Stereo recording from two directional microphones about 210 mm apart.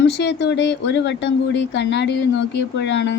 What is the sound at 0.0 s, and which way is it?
A woman's voice, 55° left (ahead or behind).